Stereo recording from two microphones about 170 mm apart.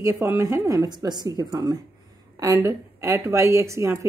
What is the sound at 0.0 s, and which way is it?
A woman's voice, 15° right (ahead or behind).